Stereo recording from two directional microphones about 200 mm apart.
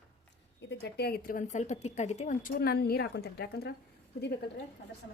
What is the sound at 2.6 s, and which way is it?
A woman's voice, 50° left (ahead or behind).